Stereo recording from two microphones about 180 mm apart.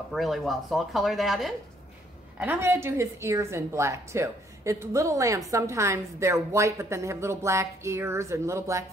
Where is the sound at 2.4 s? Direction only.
15° right (ahead or behind).